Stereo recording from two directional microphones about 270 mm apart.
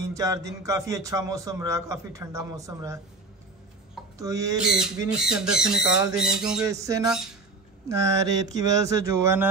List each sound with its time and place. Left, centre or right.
0.0 s a man's voice: centre
4.2 s a man's voice: centre
4.7 s a man's voice: centre